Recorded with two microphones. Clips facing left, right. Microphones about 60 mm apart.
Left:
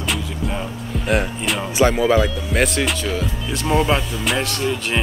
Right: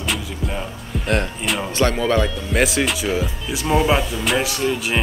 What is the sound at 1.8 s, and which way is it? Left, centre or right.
Speech, centre.